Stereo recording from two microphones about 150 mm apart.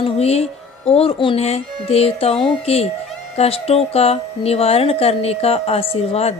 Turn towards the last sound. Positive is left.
turn(degrees=40)  # may be behind; listen again after turning